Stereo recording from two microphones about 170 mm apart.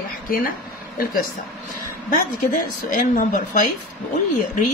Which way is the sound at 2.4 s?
55° left (ahead or behind).